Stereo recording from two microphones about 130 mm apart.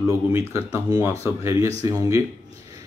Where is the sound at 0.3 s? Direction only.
20° right (ahead or behind).